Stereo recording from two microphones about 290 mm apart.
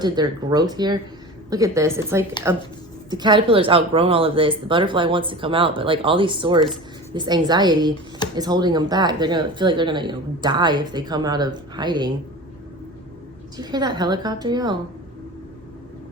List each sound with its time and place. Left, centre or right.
0.0 s speech: centre
13.6 s speech: centre